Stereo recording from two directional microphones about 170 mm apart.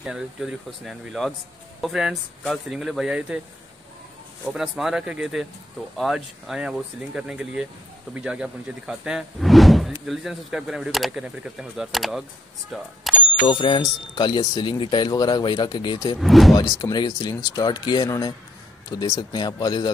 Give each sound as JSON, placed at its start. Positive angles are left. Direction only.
{"t": 0.0, "sound": "speech", "side_deg": -5}
{"t": 4.5, "sound": "speech", "side_deg": -5}
{"t": 13.4, "sound": "speech", "side_deg": 30}
{"t": 16.2, "sound": "speech", "side_deg": 0}
{"t": 16.5, "sound": "speech", "side_deg": 20}